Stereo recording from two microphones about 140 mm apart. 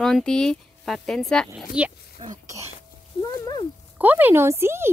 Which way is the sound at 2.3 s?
25° right (ahead or behind).